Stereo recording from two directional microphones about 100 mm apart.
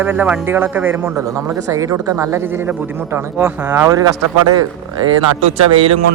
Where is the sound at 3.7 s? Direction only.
20° right (ahead or behind).